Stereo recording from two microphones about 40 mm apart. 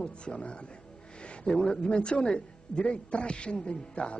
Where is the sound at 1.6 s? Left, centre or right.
Left.